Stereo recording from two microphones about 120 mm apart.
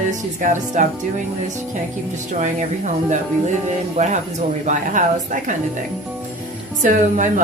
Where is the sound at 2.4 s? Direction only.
90° right.